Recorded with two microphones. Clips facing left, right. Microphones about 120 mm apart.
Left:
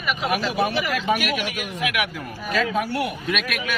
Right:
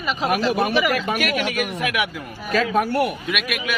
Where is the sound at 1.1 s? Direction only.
60° right (ahead or behind).